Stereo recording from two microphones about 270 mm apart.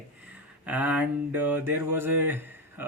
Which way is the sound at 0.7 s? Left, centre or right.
Centre.